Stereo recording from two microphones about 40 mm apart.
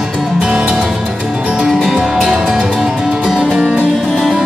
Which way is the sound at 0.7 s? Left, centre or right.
Centre.